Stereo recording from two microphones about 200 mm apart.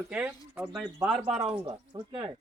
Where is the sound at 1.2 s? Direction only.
30° right (ahead or behind).